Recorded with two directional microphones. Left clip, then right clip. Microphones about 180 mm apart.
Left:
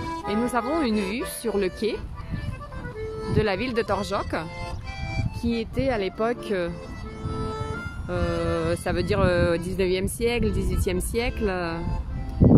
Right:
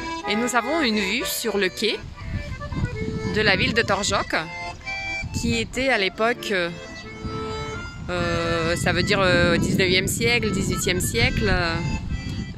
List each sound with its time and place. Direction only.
0.0 s music: 40° right (ahead or behind)
0.5 s speech: 5° left (ahead or behind)
3.3 s speech: 10° left (ahead or behind)
4.8 s music: 40° right (ahead or behind)
5.4 s speech: centre (ahead or behind)
7.2 s music: 40° right (ahead or behind)
8.1 s speech: 5° left (ahead or behind)